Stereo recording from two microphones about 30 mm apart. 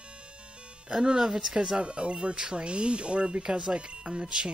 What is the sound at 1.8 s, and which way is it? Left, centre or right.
Speech, right.